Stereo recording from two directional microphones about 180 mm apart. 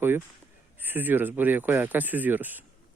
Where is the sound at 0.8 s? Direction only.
10° right (ahead or behind).